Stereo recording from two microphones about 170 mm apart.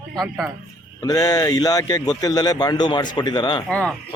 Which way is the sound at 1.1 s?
20° left (ahead or behind).